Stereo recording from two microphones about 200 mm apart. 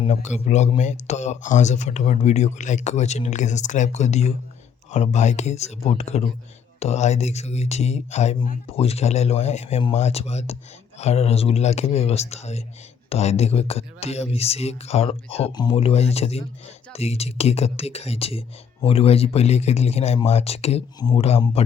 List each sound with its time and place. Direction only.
0.0 s speech: 35° left (ahead or behind)